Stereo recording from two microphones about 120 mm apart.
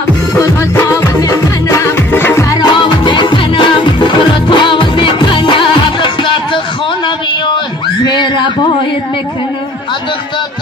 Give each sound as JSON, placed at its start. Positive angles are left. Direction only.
{"t": 0.4, "sound": "music", "side_deg": 25}
{"t": 2.5, "sound": "music", "side_deg": 40}
{"t": 7.2, "sound": "a sound", "side_deg": 40}